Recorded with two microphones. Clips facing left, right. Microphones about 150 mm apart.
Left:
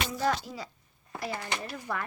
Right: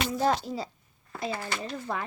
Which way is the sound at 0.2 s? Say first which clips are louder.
Right 3 dB; 30° right (ahead or behind).